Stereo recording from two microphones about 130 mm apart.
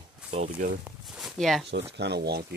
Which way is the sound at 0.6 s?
75° right (ahead or behind).